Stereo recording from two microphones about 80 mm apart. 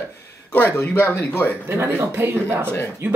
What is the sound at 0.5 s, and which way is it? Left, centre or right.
Speech, left.